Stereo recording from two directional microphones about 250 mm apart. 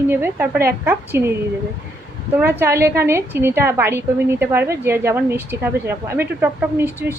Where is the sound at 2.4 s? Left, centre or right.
Centre.